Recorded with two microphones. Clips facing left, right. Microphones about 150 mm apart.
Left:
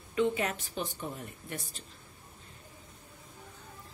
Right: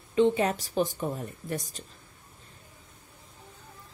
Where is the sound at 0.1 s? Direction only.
30° right (ahead or behind).